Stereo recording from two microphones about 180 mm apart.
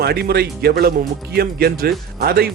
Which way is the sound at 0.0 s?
60° right (ahead or behind).